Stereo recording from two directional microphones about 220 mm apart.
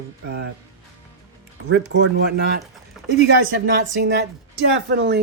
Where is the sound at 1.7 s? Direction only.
55° right (ahead or behind).